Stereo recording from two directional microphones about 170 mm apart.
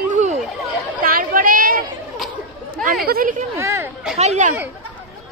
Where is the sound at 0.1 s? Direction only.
45° right (ahead or behind).